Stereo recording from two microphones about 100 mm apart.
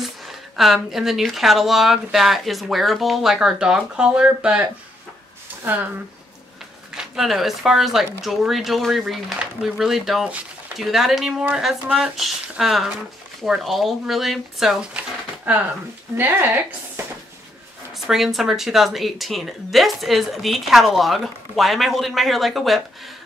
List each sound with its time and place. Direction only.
0.2 s a sound: centre (ahead or behind)
0.9 s speech: centre (ahead or behind)
5.7 s speech: 20° right (ahead or behind)
7.0 s speech: 5° right (ahead or behind); by 17.0 s 20° right (ahead or behind)
17.9 s speech: centre (ahead or behind)